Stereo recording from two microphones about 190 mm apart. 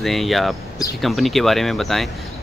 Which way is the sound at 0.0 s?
Centre (ahead or behind).